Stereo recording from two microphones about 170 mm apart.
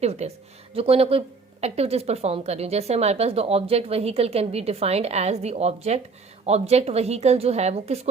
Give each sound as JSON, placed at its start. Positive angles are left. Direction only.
{"t": 0.0, "sound": "a woman's voice", "side_deg": -40}